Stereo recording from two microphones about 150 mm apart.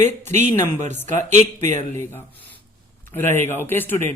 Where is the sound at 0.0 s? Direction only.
50° right (ahead or behind).